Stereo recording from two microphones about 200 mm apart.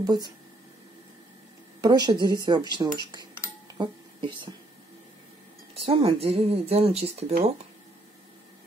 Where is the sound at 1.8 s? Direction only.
20° right (ahead or behind).